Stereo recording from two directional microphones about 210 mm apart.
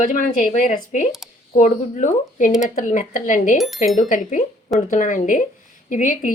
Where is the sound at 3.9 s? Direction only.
35° left (ahead or behind).